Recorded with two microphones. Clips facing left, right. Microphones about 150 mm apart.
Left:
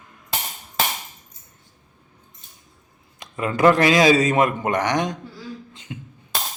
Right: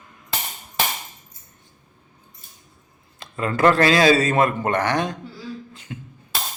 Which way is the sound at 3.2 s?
15° left (ahead or behind).